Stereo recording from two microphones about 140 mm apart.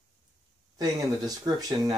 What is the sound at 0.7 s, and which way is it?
Speech, 25° right (ahead or behind).